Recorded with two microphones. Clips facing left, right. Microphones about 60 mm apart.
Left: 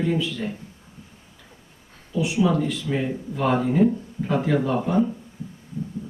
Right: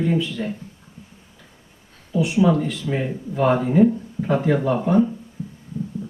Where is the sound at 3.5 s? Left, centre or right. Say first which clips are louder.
Right 3 dB; centre.